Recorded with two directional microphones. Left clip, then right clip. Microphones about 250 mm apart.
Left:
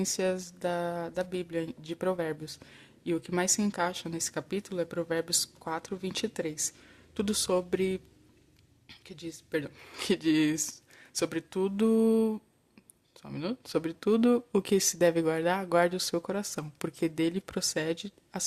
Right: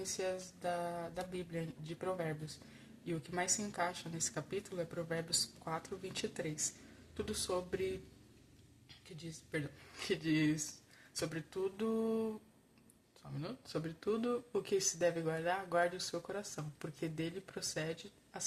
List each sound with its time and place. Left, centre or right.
0.2 s speech: left
8.9 s speech: left